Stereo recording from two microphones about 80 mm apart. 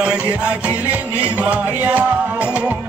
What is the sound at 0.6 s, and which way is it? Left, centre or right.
Music, centre.